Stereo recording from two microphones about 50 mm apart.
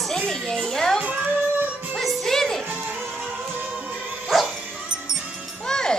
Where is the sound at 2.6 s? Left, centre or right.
Right.